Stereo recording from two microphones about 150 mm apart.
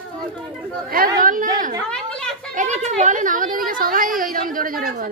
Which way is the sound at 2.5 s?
50° right (ahead or behind).